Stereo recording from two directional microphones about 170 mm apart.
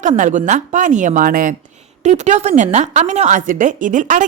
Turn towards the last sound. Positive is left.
turn(degrees=-50)  # may be behind; listen again after turning